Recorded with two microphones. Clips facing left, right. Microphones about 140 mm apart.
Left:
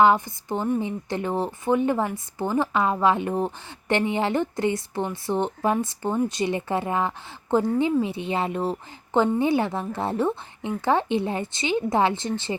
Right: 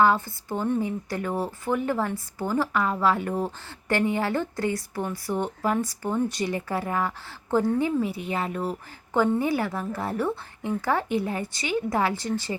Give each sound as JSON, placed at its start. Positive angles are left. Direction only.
{"t": 0.0, "sound": "speech", "side_deg": 20}